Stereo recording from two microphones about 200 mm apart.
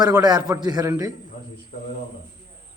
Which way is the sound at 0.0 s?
20° right (ahead or behind).